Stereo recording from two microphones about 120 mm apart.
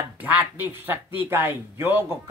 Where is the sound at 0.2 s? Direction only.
15° right (ahead or behind).